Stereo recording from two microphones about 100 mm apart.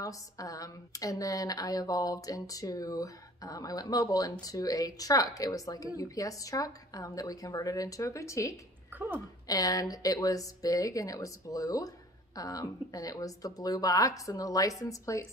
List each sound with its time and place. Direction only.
0.0 s speech: 35° left (ahead or behind)
8.9 s a woman's voice: 20° right (ahead or behind)
9.5 s speech: 35° left (ahead or behind)